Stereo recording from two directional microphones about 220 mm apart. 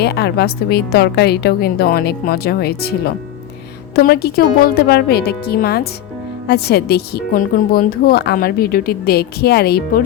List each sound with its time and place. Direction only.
0.0 s speech: 50° left (ahead or behind)